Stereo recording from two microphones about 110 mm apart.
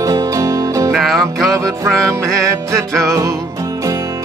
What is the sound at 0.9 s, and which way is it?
Music, centre (ahead or behind).